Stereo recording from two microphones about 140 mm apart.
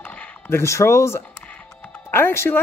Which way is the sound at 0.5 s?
20° left (ahead or behind).